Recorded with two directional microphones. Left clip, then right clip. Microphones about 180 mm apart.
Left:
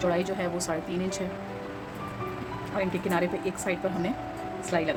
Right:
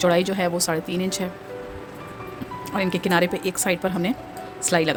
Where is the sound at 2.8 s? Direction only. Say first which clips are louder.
Right 7 dB; 60° right (ahead or behind).